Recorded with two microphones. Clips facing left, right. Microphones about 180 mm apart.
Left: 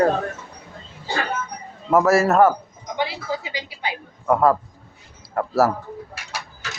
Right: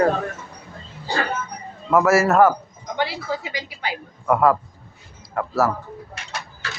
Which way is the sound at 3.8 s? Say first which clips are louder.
Even; 25° left (ahead or behind).